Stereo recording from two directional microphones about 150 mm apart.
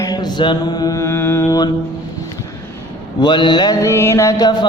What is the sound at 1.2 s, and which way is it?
Mantra, 15° left (ahead or behind).